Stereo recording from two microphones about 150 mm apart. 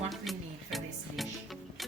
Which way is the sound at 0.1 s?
Centre (ahead or behind).